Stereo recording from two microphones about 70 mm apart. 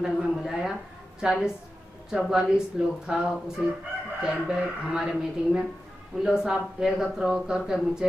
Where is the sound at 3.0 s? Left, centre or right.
Centre.